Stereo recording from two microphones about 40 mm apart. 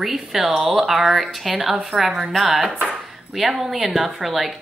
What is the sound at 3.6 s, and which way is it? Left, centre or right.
Speech, centre.